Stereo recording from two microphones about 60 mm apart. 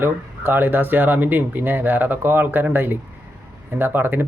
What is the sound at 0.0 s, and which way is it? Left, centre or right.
Speech, right.